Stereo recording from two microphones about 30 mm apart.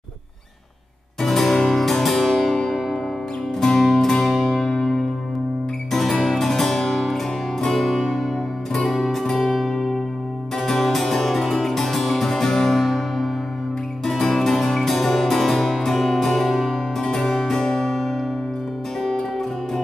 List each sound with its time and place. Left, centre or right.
1.2 s music: centre
5.9 s music: centre
8.0 s music: centre
9.1 s music: centre
9.4 s music: centre
10.6 s music: centre
16.4 s music: centre
17.1 s music: left
17.4 s music: centre